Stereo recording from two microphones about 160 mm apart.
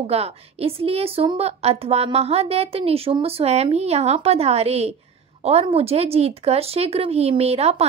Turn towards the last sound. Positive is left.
turn(degrees=-40)  # may be behind; listen again after turning